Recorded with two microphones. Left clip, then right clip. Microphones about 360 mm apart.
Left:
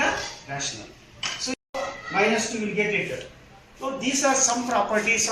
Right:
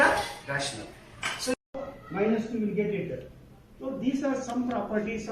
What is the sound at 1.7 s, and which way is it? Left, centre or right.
A man's voice, left.